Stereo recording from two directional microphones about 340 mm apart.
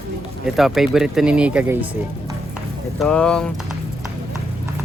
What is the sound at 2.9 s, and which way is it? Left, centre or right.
Speech, centre.